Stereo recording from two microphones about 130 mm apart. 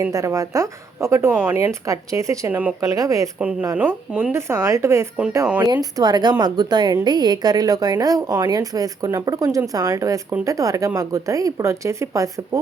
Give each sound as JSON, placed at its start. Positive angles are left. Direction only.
{"t": 0.0, "sound": "a woman's voice", "side_deg": -25}
{"t": 2.5, "sound": "speech", "side_deg": -10}
{"t": 2.8, "sound": "a woman's voice", "side_deg": -25}
{"t": 3.3, "sound": "a woman's voice", "side_deg": -10}